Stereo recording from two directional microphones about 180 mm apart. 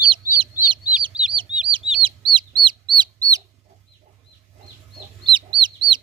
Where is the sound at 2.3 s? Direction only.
25° right (ahead or behind).